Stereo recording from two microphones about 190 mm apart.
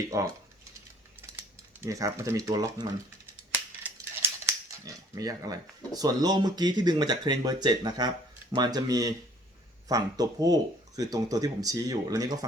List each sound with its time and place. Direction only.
0.1 s speech: 15° right (ahead or behind)
1.4 s speech: 15° right (ahead or behind)